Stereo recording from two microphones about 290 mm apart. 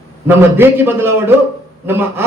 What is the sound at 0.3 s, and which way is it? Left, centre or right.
A man's voice, centre.